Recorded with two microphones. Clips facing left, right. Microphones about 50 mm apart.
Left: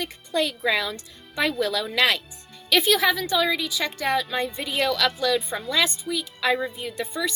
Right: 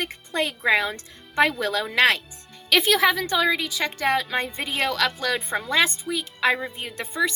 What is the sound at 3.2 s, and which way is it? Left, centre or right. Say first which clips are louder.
Speech: right 1 dB; right.